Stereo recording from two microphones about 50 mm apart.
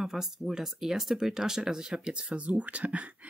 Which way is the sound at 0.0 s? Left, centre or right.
Centre.